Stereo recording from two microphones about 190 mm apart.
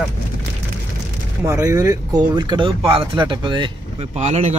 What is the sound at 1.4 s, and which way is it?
Speech, 15° right (ahead or behind).